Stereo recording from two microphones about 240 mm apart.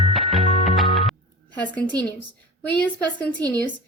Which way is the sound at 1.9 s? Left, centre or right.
Centre.